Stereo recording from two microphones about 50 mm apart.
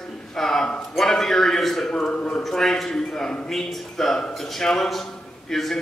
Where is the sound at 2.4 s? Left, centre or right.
Centre.